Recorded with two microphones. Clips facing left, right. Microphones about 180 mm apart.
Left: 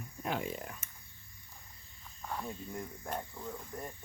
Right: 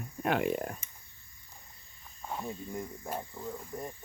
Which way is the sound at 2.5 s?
5° right (ahead or behind).